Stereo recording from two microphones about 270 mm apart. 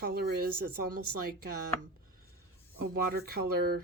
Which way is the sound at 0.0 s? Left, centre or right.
Right.